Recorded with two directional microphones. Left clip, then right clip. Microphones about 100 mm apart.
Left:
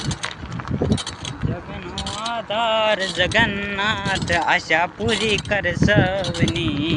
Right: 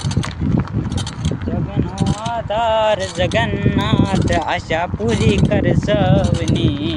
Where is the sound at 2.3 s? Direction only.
90° right.